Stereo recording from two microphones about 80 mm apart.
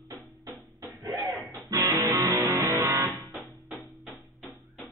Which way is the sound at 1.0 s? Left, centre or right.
Right.